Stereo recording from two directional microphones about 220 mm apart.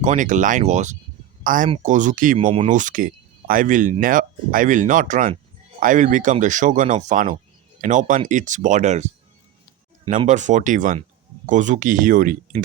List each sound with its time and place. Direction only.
0.0 s speech: 35° right (ahead or behind)
10.2 s speech: 35° right (ahead or behind)